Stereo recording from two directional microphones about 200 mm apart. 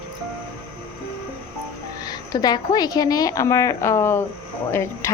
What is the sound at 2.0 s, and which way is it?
Speech, 20° left (ahead or behind).